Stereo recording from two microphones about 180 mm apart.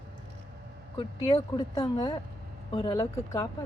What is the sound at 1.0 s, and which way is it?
Speech, 25° left (ahead or behind).